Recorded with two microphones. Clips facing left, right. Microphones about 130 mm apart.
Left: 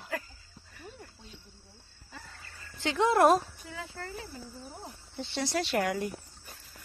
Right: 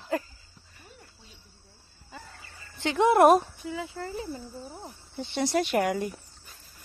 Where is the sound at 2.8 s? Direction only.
20° right (ahead or behind).